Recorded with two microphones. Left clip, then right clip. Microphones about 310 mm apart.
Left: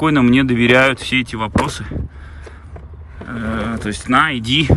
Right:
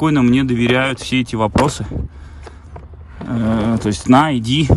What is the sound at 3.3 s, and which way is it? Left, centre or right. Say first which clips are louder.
Speech: right 4 dB; centre.